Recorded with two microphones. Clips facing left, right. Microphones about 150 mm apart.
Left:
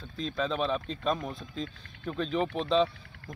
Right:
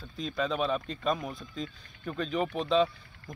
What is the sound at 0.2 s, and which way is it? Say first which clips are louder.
Speech: even; 5° right (ahead or behind).